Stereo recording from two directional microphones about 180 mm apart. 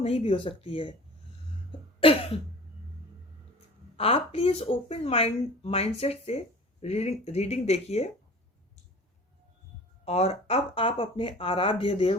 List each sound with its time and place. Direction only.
0.0 s speech: 35° left (ahead or behind)
1.7 s cough: 30° left (ahead or behind)
3.9 s speech: 30° left (ahead or behind)
10.1 s speech: 35° left (ahead or behind)